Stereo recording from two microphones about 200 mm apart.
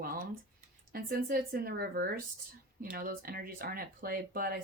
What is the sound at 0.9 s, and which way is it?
A woman's voice, 50° right (ahead or behind).